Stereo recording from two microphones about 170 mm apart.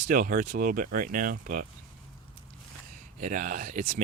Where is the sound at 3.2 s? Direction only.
50° right (ahead or behind).